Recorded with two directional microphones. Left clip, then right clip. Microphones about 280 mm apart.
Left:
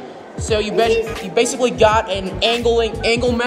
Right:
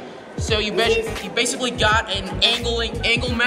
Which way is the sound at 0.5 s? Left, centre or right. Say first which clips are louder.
Left 3 dB; centre.